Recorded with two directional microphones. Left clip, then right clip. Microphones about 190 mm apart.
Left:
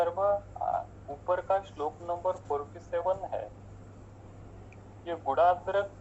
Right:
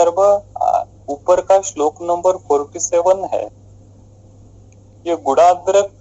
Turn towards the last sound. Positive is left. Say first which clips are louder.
# right 14 dB
turn(degrees=-60)  # may be behind; listen again after turning